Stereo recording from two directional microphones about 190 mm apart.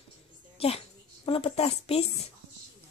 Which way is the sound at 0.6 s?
30° left (ahead or behind).